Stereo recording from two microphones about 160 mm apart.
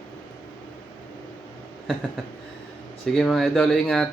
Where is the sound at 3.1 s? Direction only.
Centre (ahead or behind).